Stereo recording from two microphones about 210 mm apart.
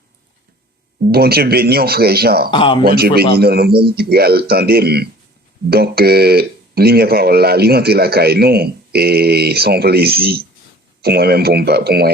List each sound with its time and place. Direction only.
1.1 s speech: 50° right (ahead or behind)
2.5 s speech: 25° left (ahead or behind)
2.8 s speech: 45° right (ahead or behind)